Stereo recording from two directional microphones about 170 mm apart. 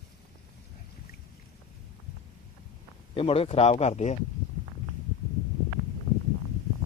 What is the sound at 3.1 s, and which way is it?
Speech, 35° left (ahead or behind).